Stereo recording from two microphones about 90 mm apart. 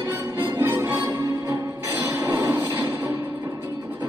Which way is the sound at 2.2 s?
35° right (ahead or behind).